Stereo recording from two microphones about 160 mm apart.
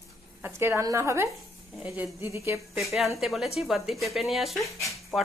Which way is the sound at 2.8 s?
Centre (ahead or behind).